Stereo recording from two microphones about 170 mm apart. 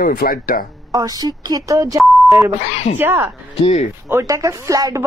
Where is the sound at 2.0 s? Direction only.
Centre (ahead or behind).